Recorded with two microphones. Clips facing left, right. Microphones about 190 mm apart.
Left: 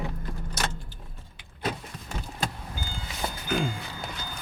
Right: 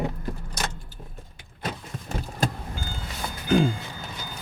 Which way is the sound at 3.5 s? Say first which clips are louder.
Right 8 dB; 35° right (ahead or behind).